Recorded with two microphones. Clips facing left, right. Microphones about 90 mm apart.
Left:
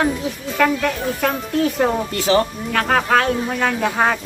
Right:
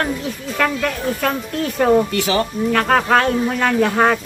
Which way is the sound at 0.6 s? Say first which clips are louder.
Left 2 dB; centre (ahead or behind).